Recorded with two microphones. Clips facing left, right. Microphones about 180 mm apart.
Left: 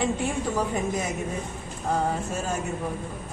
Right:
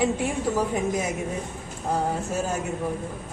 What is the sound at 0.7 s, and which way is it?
Speech, 10° right (ahead or behind).